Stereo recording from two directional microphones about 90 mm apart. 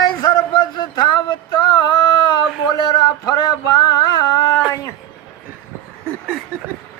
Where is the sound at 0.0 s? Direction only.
50° left (ahead or behind).